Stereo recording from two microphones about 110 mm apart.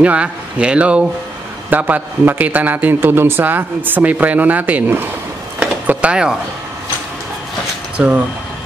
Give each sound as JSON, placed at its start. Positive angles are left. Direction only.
{"t": 0.0, "sound": "a man's voice", "side_deg": -10}
{"t": 5.6, "sound": "a sound", "side_deg": -10}
{"t": 8.0, "sound": "a man's voice", "side_deg": -5}